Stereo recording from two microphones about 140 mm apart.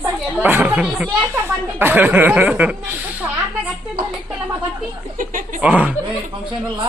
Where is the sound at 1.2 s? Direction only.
15° right (ahead or behind).